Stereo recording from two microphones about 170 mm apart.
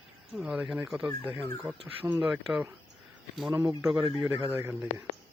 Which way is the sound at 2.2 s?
5° right (ahead or behind).